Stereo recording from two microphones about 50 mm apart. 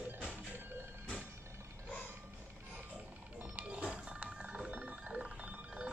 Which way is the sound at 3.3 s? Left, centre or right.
Right.